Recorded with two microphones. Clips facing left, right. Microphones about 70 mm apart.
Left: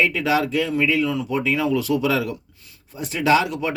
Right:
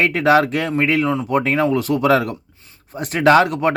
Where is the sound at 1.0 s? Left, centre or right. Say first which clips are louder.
Right 4 dB; right.